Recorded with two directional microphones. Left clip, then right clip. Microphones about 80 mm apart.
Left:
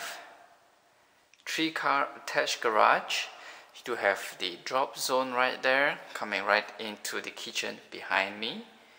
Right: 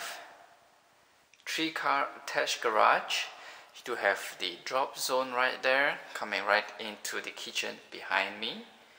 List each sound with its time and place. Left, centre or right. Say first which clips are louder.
1.4 s speech: left 2 dB; left